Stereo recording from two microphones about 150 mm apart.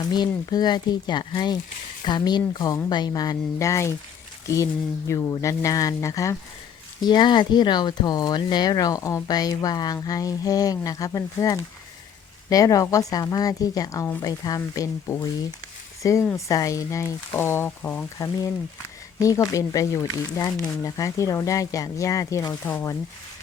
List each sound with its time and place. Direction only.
0.0 s speech: 25° left (ahead or behind)
16.3 s speech: 20° left (ahead or behind)